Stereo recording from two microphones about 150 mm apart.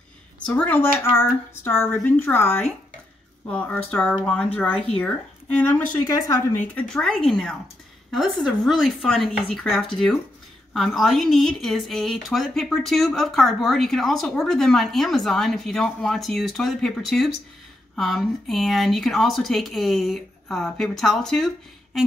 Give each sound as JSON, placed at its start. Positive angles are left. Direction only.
{"t": 0.5, "sound": "a woman's voice", "side_deg": 10}